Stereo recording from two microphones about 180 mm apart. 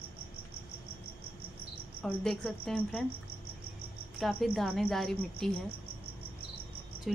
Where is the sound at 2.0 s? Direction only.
5° left (ahead or behind).